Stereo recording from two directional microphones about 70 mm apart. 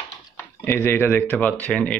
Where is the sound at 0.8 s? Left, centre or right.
Left.